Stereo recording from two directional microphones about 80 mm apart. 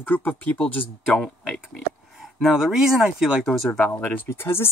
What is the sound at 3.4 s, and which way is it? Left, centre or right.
Speech, centre.